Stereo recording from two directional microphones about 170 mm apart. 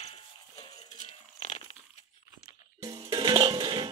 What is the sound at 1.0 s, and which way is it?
Dog, 40° left (ahead or behind).